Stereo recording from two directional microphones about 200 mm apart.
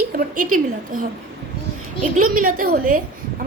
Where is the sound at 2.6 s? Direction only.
45° right (ahead or behind).